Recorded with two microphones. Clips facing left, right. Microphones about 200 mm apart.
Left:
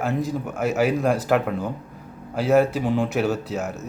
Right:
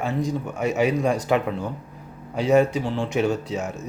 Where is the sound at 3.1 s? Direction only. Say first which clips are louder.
Even; 5° left (ahead or behind).